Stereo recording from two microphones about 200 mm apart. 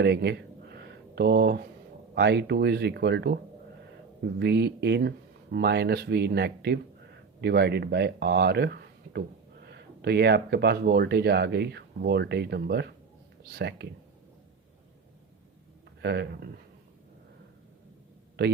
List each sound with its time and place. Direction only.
0.0 s a sound: 55° right (ahead or behind)
2.1 s speech: 55° right (ahead or behind)
4.4 s speech: 55° right (ahead or behind)
16.0 s speech: 55° right (ahead or behind)
18.4 s a man's voice: 55° right (ahead or behind)